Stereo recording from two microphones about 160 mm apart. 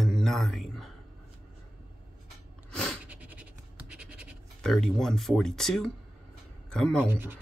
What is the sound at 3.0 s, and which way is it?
Scratch, 10° right (ahead or behind).